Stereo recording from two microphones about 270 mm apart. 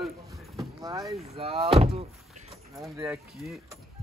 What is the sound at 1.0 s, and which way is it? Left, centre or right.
Speech, centre.